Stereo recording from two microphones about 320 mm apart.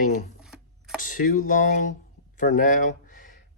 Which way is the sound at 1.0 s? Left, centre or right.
Left.